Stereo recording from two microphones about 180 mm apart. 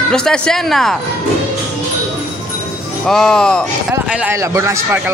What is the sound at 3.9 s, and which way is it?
A man's voice, 15° right (ahead or behind).